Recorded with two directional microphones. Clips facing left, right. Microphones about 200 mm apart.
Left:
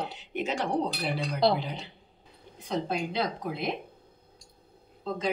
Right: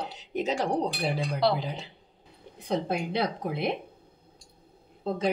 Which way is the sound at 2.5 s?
60° right (ahead or behind).